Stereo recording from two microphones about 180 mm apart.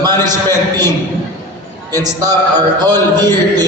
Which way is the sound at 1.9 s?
20° right (ahead or behind).